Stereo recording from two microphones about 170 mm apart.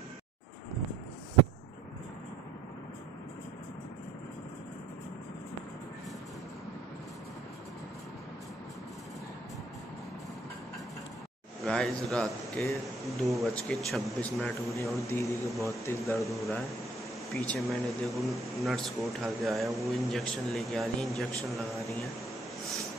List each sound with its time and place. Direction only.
11.6 s a man's voice: 5° left (ahead or behind)
15.0 s a man's voice: 15° left (ahead or behind)
16.2 s speech: centre (ahead or behind)